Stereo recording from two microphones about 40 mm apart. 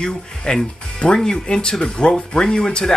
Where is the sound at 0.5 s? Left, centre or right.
Left.